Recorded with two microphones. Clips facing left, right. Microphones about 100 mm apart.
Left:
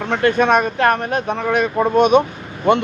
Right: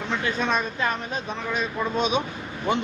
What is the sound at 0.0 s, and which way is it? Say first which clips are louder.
A man's voice: left 10 dB; 60° left (ahead or behind).